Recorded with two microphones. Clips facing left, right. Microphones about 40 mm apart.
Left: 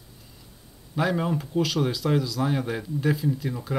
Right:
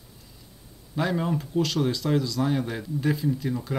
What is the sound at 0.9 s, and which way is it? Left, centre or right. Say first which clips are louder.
A man's voice: left 1 dB; centre.